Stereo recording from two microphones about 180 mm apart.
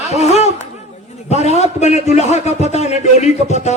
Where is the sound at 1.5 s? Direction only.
40° left (ahead or behind).